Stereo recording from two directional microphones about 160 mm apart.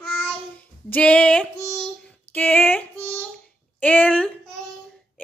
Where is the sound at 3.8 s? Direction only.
10° left (ahead or behind).